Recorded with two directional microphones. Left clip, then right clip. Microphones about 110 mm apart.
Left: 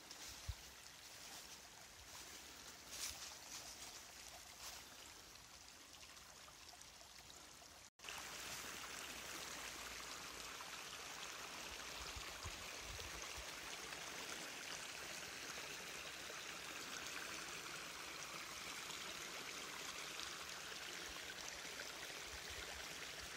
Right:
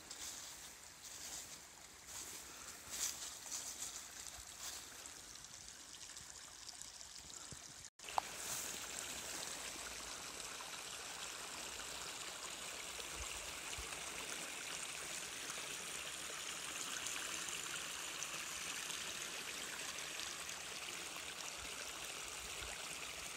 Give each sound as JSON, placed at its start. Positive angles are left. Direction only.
{"t": 8.1, "sound": "stream", "side_deg": -55}